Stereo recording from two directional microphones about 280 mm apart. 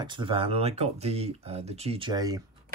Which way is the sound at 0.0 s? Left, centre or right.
Centre.